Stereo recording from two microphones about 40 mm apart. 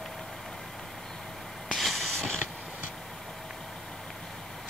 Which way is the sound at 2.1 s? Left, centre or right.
Centre.